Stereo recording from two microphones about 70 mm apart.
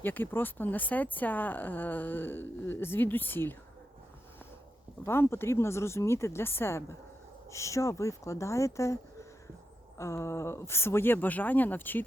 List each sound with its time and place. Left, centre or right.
0.0 s speech: left
5.0 s speech: left